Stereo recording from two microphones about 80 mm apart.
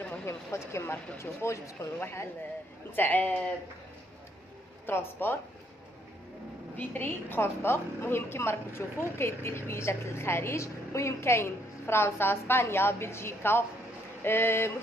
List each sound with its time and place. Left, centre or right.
0.0 s a sound: left
0.3 s a woman's voice: left
3.0 s speech: left
4.8 s speech: left
6.8 s a woman's voice: left